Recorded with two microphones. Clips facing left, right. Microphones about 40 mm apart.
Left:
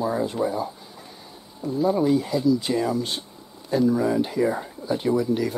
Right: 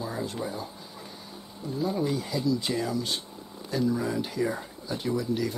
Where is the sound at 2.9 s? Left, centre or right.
Left.